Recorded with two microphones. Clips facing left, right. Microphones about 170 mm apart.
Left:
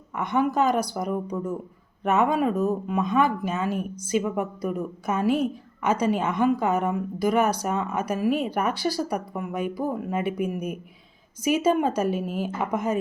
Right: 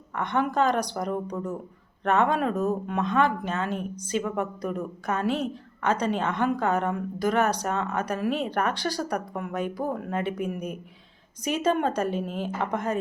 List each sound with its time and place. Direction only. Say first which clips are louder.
0.2 s a woman's voice: left 2 dB; 10° left (ahead or behind)